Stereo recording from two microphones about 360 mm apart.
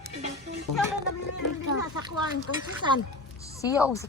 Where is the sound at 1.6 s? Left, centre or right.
Left.